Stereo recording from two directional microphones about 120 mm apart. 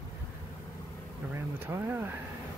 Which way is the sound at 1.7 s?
30° right (ahead or behind).